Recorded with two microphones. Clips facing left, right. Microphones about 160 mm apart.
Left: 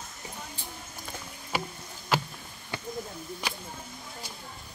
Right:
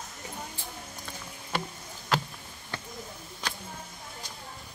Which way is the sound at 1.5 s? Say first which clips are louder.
Left 1 dB; 5° left (ahead or behind).